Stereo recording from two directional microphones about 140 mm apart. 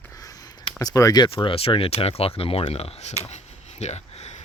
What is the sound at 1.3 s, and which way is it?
Speech, 40° left (ahead or behind).